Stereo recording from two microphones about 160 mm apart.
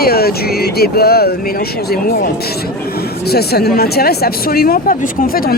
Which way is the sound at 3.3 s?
80° left.